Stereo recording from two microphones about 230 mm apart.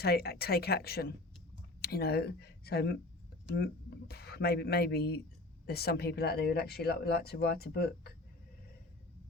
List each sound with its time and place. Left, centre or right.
0.0 s speech: left